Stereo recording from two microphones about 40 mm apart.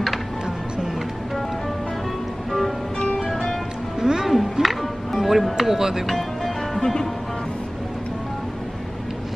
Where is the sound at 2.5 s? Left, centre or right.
Centre.